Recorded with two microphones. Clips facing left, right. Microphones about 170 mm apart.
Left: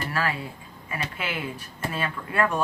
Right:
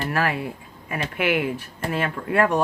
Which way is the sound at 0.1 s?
55° right (ahead or behind).